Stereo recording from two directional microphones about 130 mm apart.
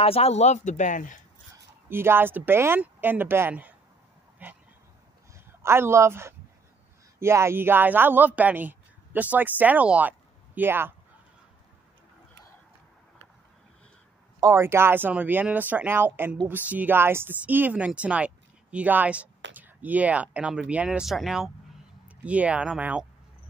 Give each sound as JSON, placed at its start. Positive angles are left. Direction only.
{"t": 0.0, "sound": "speech", "side_deg": 50}
{"t": 1.9, "sound": "a man's voice", "side_deg": -15}
{"t": 14.4, "sound": "speech", "side_deg": -20}